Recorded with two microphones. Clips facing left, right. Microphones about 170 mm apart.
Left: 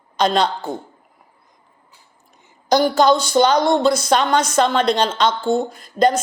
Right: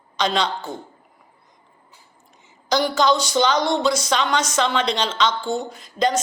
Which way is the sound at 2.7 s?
50° left (ahead or behind).